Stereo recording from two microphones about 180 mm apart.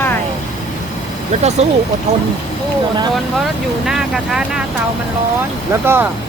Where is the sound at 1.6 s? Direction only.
35° right (ahead or behind).